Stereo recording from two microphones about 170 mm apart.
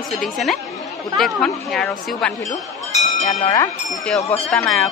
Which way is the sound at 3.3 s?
20° left (ahead or behind).